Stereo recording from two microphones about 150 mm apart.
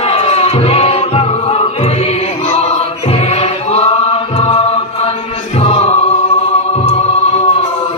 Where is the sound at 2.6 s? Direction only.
45° left (ahead or behind).